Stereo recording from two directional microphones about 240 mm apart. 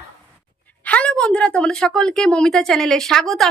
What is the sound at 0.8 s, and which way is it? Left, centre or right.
A woman's voice, centre.